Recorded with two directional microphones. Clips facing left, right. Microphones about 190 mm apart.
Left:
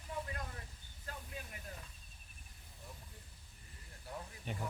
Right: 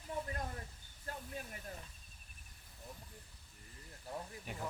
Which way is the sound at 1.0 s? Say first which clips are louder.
Right 3 dB; 40° right (ahead or behind).